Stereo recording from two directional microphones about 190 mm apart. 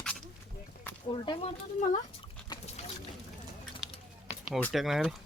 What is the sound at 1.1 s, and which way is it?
Speech, 25° left (ahead or behind).